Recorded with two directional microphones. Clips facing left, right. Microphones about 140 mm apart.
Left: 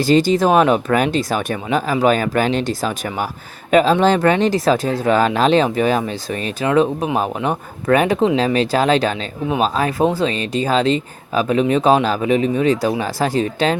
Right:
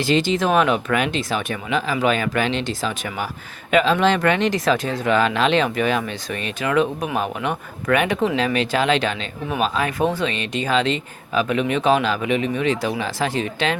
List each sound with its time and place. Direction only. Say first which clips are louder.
0.0 s speech: left 5 dB; 40° left (ahead or behind)